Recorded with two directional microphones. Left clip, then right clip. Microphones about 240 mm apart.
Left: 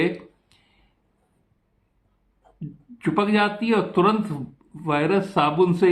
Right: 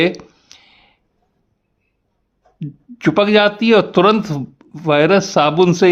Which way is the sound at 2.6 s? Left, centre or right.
Right.